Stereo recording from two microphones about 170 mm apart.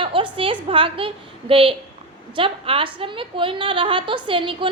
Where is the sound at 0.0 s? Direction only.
30° right (ahead or behind).